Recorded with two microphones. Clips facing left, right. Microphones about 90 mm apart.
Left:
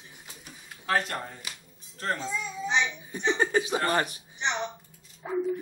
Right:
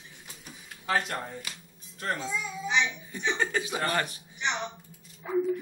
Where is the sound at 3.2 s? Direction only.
30° left (ahead or behind).